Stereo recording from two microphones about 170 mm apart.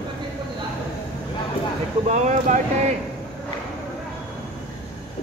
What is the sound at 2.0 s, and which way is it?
Speech, 45° right (ahead or behind).